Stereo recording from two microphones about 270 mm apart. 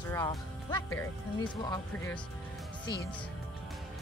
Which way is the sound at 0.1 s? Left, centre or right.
Centre.